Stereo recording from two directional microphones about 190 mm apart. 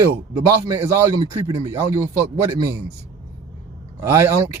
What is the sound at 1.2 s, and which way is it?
Speech, 20° right (ahead or behind).